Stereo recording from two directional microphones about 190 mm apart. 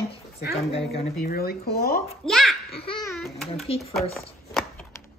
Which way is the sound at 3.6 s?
30° left (ahead or behind).